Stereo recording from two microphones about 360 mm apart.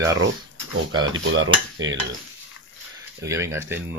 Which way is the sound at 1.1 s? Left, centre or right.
Right.